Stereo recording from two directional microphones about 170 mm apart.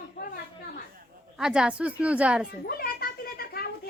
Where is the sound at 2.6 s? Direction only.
60° left (ahead or behind).